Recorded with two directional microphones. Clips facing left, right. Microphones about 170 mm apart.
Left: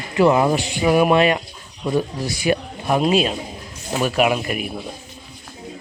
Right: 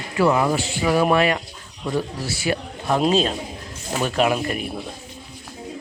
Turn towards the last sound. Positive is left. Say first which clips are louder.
# left 1 dB
turn(degrees=15)  # may be behind; listen again after turning